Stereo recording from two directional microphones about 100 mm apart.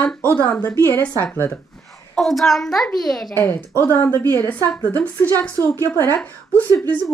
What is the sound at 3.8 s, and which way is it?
Speech, 25° left (ahead or behind).